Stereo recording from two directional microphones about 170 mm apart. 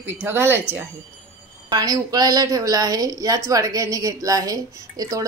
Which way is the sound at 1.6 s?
20° right (ahead or behind).